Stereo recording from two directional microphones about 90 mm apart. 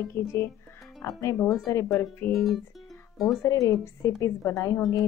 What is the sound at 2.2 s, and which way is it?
Speech, 20° left (ahead or behind).